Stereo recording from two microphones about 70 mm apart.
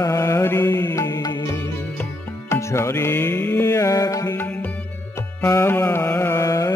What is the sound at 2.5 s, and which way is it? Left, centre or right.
Music, left.